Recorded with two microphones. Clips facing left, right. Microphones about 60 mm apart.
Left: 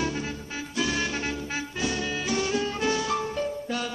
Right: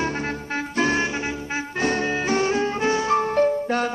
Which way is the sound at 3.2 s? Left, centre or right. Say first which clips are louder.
Right 10 dB; right.